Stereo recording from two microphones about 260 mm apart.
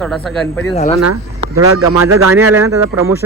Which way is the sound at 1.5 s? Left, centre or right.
Right.